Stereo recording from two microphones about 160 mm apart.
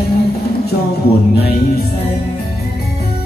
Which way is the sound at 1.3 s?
80° left.